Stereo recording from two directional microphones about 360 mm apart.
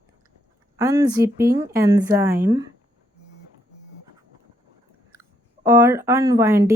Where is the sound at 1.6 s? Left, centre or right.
Centre.